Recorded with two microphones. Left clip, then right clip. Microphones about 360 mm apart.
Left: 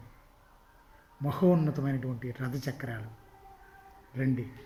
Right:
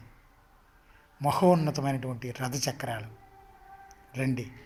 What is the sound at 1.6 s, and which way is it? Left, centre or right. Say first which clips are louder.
Speech: right 3 dB; right.